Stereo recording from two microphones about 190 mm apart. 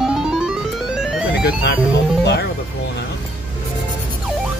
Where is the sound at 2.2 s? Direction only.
60° left (ahead or behind).